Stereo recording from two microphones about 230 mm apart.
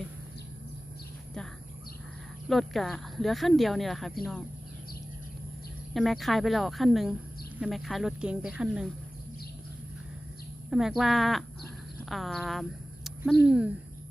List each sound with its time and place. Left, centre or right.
2.5 s speech: centre
5.9 s speech: centre
10.7 s speech: centre
13.3 s speech: left